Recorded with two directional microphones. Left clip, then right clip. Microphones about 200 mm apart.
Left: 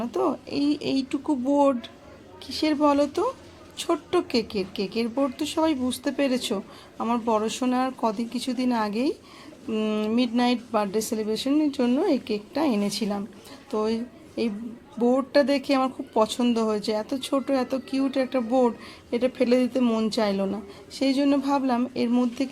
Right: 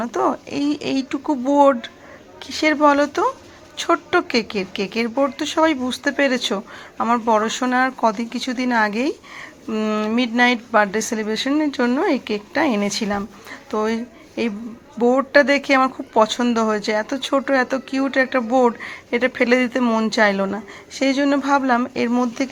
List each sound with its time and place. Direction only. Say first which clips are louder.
0.0 s speech: right 6 dB; 5° right (ahead or behind)